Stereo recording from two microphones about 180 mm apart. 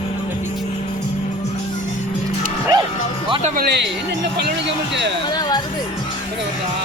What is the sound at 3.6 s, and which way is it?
Speech, 65° right (ahead or behind).